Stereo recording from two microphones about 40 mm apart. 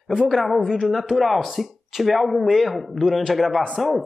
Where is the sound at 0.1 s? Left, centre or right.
Centre.